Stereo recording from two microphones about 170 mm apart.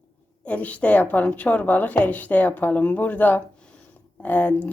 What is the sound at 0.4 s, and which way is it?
Speech, 10° left (ahead or behind).